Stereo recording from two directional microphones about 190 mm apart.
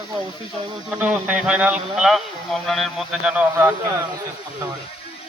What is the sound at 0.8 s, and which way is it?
A man's voice, 5° right (ahead or behind).